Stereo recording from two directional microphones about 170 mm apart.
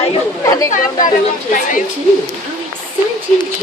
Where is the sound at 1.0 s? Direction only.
50° left (ahead or behind).